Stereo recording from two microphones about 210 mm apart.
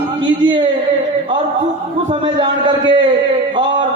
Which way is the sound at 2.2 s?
20° right (ahead or behind).